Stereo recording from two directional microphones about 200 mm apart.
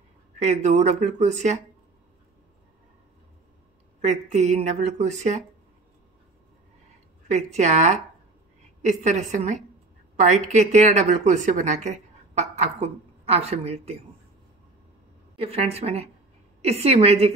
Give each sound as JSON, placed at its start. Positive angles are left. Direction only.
{"t": 0.4, "sound": "a woman's voice", "side_deg": -35}
{"t": 4.0, "sound": "a woman's voice", "side_deg": -35}
{"t": 7.2, "sound": "a woman's voice", "side_deg": -35}
{"t": 15.3, "sound": "a woman's voice", "side_deg": -30}